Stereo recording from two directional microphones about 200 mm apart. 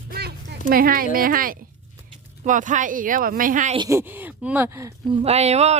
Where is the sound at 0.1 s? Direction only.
50° right (ahead or behind).